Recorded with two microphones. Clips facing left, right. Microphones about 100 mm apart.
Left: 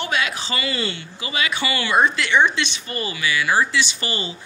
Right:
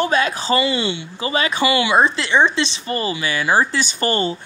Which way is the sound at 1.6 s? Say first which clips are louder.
Right 9 dB; 20° right (ahead or behind).